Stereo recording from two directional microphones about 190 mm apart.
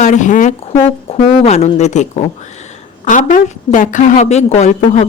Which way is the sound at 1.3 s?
30° left (ahead or behind).